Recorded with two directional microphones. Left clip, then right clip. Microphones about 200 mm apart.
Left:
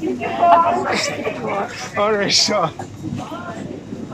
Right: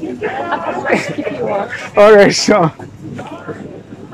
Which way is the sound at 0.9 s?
60° right (ahead or behind).